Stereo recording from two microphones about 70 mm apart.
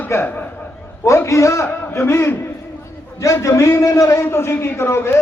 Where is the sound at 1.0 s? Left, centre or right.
Left.